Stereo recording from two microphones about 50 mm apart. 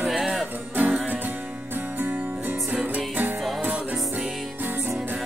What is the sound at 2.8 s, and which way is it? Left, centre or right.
Music, right.